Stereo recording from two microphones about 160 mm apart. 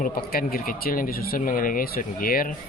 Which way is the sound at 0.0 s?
65° left (ahead or behind).